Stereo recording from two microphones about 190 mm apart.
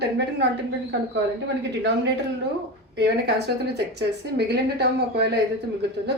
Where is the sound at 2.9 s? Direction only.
60° right (ahead or behind).